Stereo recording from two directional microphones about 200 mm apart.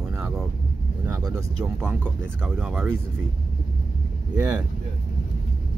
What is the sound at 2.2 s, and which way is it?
Speech, 5° right (ahead or behind).